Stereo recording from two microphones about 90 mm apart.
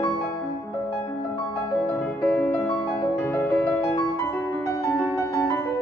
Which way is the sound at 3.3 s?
30° left (ahead or behind).